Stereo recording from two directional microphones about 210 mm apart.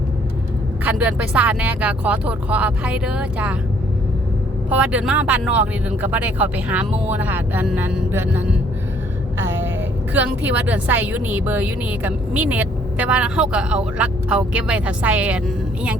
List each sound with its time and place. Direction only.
0.9 s a woman's voice: 5° right (ahead or behind)
4.7 s a woman's voice: 5° right (ahead or behind)
10.2 s a woman's voice: 5° right (ahead or behind)